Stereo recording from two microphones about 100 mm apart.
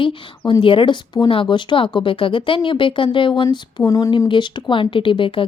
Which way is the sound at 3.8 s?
35° left (ahead or behind).